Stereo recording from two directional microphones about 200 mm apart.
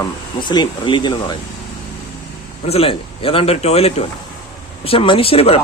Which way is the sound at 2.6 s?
30° left (ahead or behind).